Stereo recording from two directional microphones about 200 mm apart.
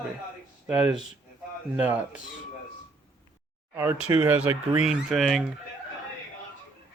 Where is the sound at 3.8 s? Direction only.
10° right (ahead or behind).